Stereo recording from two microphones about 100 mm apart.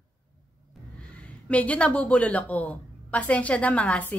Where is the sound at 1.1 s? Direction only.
15° left (ahead or behind).